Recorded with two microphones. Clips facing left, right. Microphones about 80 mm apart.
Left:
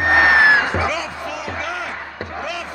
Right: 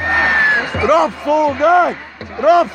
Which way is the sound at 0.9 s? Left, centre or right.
Right.